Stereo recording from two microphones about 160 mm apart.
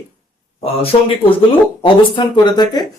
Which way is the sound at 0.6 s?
35° left (ahead or behind).